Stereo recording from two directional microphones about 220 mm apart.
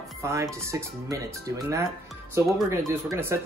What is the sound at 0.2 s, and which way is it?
Speech, 15° right (ahead or behind).